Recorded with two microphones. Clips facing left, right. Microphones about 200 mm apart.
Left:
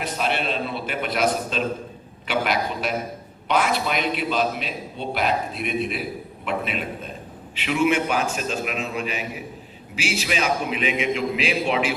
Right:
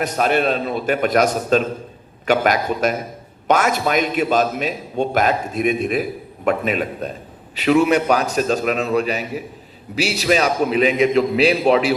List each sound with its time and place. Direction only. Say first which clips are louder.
0.0 s a man's voice: right 7 dB; 45° right (ahead or behind)